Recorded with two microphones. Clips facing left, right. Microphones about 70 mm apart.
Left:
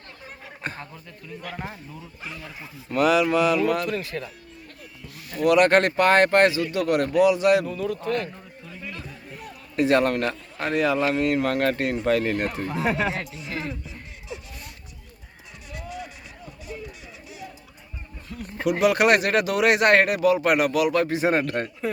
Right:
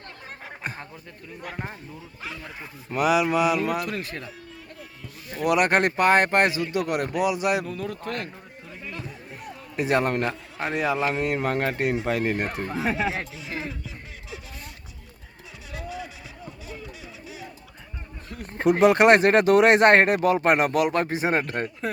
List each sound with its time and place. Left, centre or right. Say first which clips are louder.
0.6 s a man's voice: left 2 dB; centre
2.9 s speech: left 2 dB; centre
5.4 s speech: left 3 dB; centre
7.8 s speech: left 5 dB; right
8.9 s a man's voice: right 3 dB; right
13.1 s music: left 1 dB; right
18.3 s speech: right 3 dB; right